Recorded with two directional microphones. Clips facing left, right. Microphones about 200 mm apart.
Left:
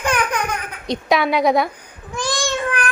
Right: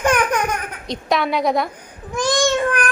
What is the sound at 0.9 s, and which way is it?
Speech, centre (ahead or behind).